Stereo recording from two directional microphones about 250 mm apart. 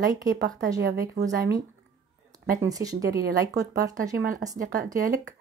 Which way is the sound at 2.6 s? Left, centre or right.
Centre.